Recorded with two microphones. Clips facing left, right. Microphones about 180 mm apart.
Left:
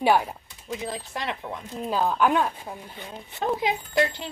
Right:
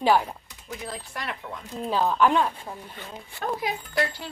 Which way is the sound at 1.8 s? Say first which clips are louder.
Right 1 dB; 5° left (ahead or behind).